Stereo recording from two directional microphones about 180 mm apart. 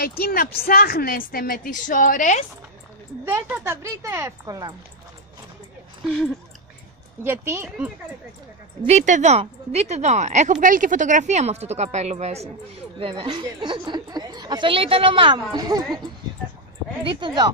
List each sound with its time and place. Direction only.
0.2 s a woman's voice: 55° left (ahead or behind)
3.3 s a woman's voice: 10° right (ahead or behind)
7.2 s a woman's voice: 15° right (ahead or behind)
8.8 s a woman's voice: 40° right (ahead or behind)
13.0 s a woman's voice: 25° right (ahead or behind)
17.0 s a woman's voice: 25° right (ahead or behind)